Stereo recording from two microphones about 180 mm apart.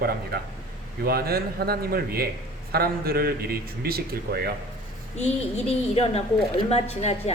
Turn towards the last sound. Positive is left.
turn(degrees=35)  # may be behind; listen again after turning